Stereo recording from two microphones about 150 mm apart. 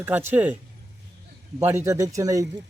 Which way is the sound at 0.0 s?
15° right (ahead or behind).